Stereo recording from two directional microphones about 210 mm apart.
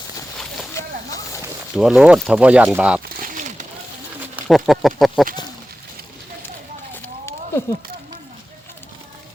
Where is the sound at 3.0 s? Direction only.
40° right (ahead or behind).